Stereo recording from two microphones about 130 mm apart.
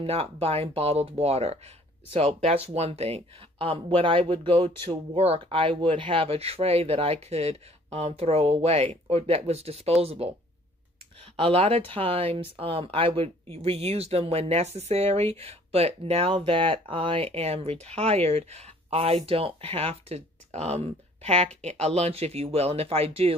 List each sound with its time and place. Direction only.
0.0 s speech: 50° right (ahead or behind)
11.3 s speech: 45° right (ahead or behind)